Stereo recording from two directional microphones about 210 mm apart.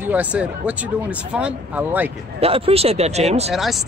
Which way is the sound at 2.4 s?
30° right (ahead or behind).